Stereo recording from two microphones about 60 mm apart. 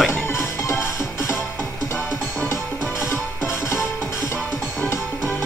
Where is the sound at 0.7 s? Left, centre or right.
Left.